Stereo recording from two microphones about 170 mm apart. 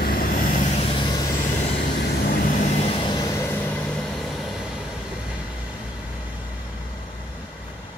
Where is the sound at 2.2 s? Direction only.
55° left (ahead or behind); by 3.8 s 15° left (ahead or behind).